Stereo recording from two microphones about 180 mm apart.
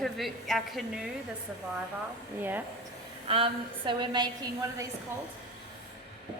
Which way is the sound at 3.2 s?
30° right (ahead or behind).